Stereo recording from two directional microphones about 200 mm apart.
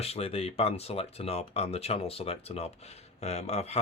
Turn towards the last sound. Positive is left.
turn(degrees=30)  # may be behind; listen again after turning